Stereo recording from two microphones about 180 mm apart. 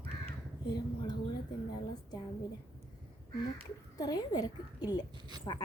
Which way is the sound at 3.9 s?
20° left (ahead or behind).